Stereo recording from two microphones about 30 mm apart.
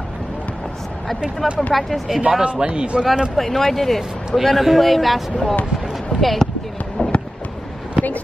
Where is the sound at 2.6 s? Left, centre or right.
Right.